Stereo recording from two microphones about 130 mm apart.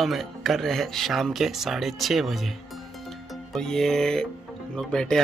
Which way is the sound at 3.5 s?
5° left (ahead or behind).